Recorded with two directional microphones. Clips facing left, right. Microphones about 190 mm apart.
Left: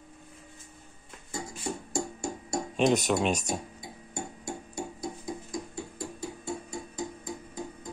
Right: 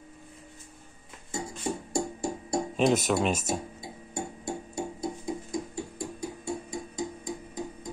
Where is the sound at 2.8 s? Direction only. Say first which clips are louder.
Even; centre (ahead or behind).